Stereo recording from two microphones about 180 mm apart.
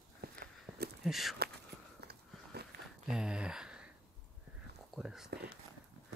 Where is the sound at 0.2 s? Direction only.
60° right (ahead or behind).